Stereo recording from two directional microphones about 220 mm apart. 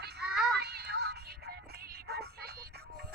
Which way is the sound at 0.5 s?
50° right (ahead or behind).